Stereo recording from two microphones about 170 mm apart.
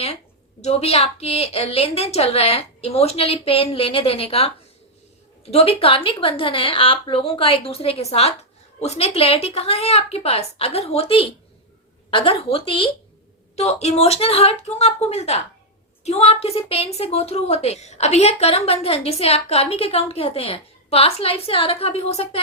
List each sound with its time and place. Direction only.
0.6 s a woman's voice: 40° left (ahead or behind)